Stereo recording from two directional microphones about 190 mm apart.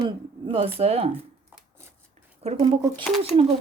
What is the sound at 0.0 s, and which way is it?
Speech, 30° right (ahead or behind).